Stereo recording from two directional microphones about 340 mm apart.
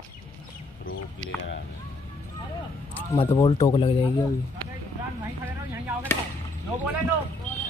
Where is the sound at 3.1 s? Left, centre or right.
Centre.